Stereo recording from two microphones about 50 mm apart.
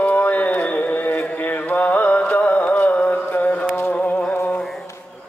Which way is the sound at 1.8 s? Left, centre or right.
Left.